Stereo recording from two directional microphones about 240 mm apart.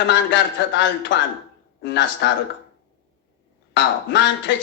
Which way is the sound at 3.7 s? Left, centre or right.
Left.